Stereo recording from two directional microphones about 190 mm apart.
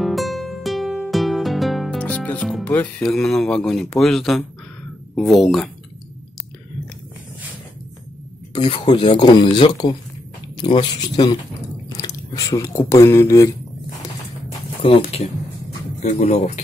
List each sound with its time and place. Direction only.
0.0 s music: centre (ahead or behind)
4.0 s speech: centre (ahead or behind)
8.5 s speech: 25° left (ahead or behind)
12.4 s speech: 20° left (ahead or behind)
14.8 s speech: 30° left (ahead or behind)